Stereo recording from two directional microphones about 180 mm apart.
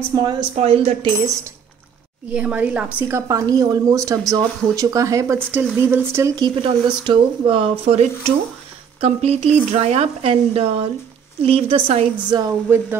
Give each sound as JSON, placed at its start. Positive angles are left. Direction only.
{"t": 0.1, "sound": "speech", "side_deg": -25}
{"t": 0.6, "sound": "speech", "side_deg": -35}
{"t": 2.3, "sound": "speech", "side_deg": -10}
{"t": 12.4, "sound": "speech", "side_deg": -10}